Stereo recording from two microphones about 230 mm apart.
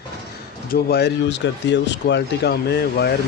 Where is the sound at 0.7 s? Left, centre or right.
Left.